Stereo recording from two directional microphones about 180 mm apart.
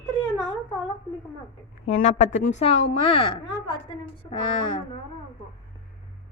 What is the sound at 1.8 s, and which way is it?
Speech, 40° left (ahead or behind).